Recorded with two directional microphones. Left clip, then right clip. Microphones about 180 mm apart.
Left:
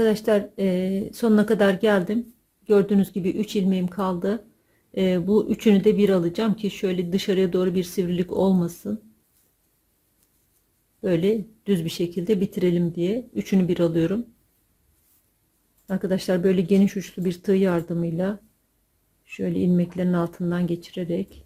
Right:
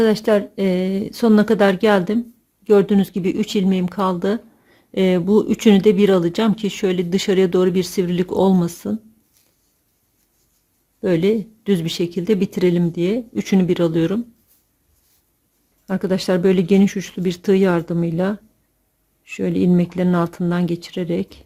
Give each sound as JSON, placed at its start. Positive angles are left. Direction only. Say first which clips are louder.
{"t": 0.0, "sound": "speech", "louder": "right 4 dB", "side_deg": -20}
{"t": 11.0, "sound": "speech", "louder": "right 4 dB", "side_deg": -20}
{"t": 15.9, "sound": "speech", "louder": "right 5 dB", "side_deg": -20}